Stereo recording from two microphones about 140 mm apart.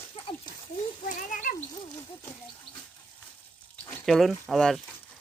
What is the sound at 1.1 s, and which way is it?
Cat, 65° left (ahead or behind).